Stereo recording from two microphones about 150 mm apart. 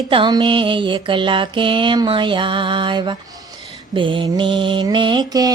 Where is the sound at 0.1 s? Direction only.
30° right (ahead or behind).